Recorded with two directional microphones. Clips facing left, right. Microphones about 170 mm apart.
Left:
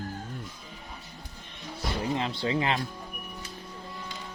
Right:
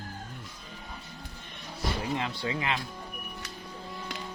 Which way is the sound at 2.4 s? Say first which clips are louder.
Left 4 dB; 30° left (ahead or behind).